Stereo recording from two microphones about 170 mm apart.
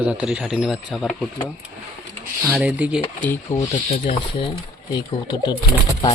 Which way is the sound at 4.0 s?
30° left (ahead or behind).